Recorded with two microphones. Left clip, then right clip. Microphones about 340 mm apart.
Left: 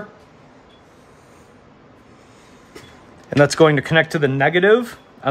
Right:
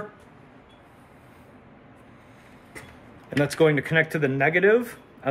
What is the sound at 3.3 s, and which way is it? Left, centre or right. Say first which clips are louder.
Speech: left 8 dB; left.